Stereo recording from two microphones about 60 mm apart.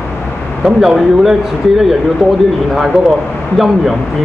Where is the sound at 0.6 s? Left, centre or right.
Centre.